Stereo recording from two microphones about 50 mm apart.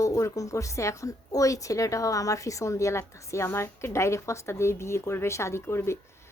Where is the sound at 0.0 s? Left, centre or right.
Left.